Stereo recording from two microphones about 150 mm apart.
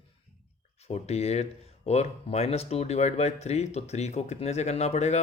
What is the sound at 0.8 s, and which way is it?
Speech, 45° left (ahead or behind).